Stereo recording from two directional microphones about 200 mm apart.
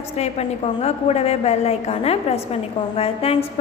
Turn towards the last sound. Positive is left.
turn(degrees=30)  # may be behind; listen again after turning